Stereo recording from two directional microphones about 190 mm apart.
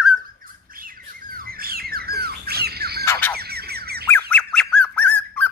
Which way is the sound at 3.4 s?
55° right (ahead or behind).